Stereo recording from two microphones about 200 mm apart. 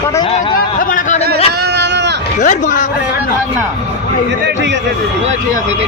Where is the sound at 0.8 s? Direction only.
40° left (ahead or behind).